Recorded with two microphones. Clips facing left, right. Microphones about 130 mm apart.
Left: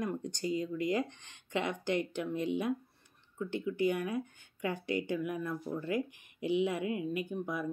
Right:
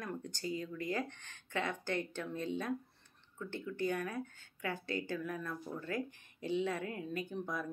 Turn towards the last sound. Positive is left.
turn(degrees=10)  # may be behind; listen again after turning